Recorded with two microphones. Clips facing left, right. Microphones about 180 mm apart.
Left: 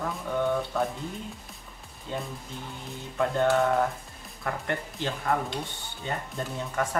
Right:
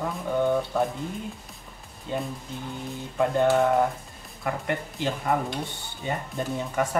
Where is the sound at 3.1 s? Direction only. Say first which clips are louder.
Right 2 dB; 10° right (ahead or behind).